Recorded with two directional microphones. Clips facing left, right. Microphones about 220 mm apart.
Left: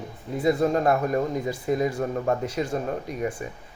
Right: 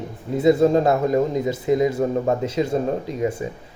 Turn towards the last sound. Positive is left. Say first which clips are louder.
# right 5 dB
turn(degrees=-25)  # may be behind; listen again after turning